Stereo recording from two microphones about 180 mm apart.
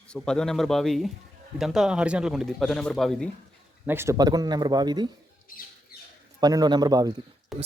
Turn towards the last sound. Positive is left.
turn(degrees=0)  # may be behind; listen again after turning